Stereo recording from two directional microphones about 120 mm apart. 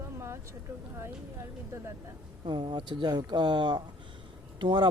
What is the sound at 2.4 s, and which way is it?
Speech, 45° right (ahead or behind).